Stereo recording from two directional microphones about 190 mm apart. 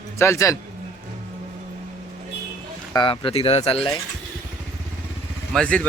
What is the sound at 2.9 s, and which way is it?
Speech, 25° left (ahead or behind).